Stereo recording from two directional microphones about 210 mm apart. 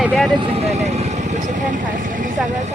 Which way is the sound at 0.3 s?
30° right (ahead or behind).